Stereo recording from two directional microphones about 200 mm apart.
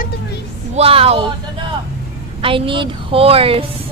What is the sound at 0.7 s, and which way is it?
Speech, 30° right (ahead or behind).